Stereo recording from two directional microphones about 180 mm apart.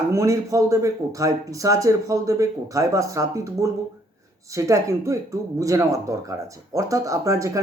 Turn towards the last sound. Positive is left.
turn(degrees=-20)  # may be behind; listen again after turning